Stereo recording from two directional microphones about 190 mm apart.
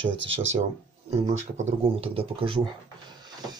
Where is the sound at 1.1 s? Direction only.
35° right (ahead or behind).